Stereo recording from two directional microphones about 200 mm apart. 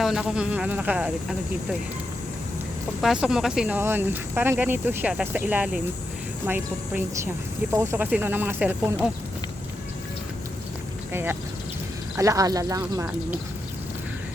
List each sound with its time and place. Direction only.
0.0 s speech: centre (ahead or behind)
3.0 s speech: centre (ahead or behind)
11.1 s speech: 10° right (ahead or behind)